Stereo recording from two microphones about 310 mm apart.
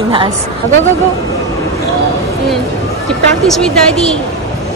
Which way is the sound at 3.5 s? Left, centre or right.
Centre.